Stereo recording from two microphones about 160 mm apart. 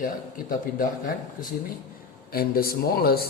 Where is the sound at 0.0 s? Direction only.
60° left (ahead or behind).